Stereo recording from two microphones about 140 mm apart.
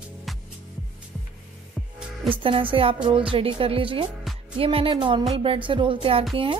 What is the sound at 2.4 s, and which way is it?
Speech, 40° right (ahead or behind).